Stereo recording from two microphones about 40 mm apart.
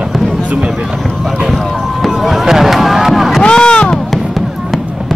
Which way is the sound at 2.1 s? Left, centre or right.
Centre.